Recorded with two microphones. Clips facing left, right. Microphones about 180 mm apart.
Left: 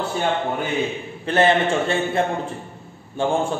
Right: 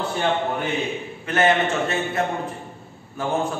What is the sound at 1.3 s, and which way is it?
Speech, 30° left (ahead or behind).